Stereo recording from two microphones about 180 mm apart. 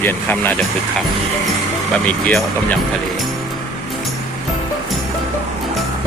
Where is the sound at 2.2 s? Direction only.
5° left (ahead or behind).